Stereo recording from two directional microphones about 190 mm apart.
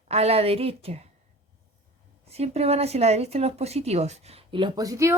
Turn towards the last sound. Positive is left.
turn(degrees=-15)  # may be behind; listen again after turning